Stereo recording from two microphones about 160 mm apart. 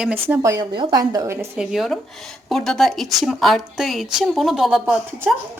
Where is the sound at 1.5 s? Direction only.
Centre (ahead or behind).